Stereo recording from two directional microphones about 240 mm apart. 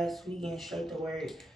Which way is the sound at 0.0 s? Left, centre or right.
Centre.